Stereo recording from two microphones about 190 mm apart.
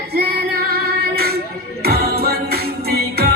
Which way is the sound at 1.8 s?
55° right (ahead or behind).